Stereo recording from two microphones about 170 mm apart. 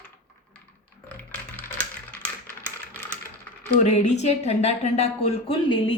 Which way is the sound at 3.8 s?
40° left (ahead or behind).